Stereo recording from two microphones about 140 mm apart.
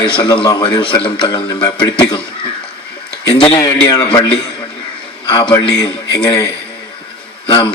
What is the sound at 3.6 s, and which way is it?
Speech, 25° left (ahead or behind).